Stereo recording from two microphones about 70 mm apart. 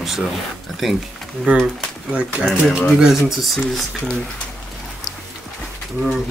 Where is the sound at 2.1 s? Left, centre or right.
Centre.